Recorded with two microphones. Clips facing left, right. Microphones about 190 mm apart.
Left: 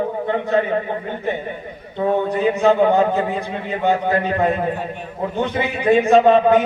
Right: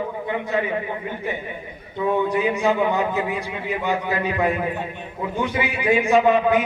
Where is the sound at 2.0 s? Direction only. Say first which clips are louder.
Left 3 dB; 45° left (ahead or behind).